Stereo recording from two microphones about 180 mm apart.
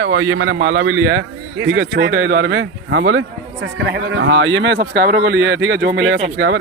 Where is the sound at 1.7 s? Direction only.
80° right.